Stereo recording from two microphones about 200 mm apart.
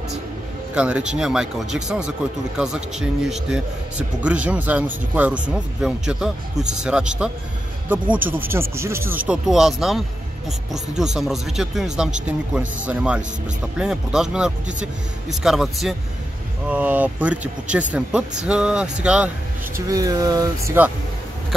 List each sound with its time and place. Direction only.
0.7 s a man's voice: 5° right (ahead or behind)
11.1 s a man's voice: centre (ahead or behind)
19.9 s speech: 20° right (ahead or behind)